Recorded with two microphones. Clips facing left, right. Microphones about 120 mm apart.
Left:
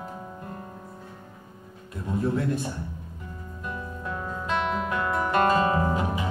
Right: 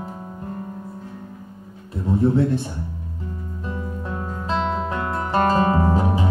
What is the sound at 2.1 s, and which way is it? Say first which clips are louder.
Speech: right 7 dB; 30° right (ahead or behind).